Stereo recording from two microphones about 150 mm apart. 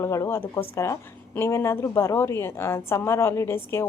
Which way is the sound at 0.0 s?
20° left (ahead or behind).